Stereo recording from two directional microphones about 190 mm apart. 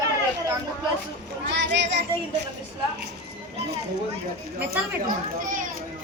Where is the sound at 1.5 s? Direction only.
65° right (ahead or behind).